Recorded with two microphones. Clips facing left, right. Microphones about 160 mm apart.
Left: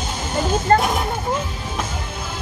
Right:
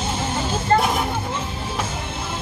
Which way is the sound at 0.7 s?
50° left (ahead or behind).